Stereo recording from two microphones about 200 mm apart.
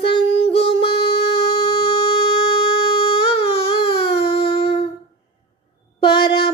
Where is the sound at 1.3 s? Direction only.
25° left (ahead or behind).